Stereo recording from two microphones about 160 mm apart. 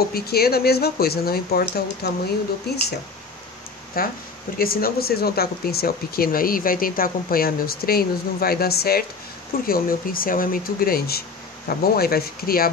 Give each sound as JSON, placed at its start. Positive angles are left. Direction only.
{"t": 0.1, "sound": "speech", "side_deg": 75}
{"t": 3.9, "sound": "speech", "side_deg": 65}